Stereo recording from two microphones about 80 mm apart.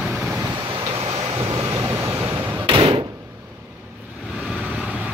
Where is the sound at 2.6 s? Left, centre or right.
Right.